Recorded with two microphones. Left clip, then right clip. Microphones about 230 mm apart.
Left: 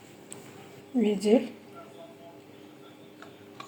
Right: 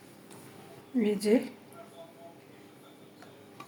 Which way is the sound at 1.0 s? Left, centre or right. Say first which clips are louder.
Left 2 dB; centre.